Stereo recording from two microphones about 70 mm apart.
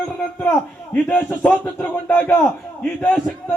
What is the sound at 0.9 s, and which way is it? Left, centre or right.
Speech, left.